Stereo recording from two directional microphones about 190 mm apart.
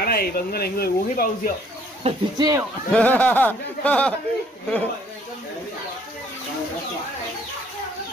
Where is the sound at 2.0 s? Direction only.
20° right (ahead or behind).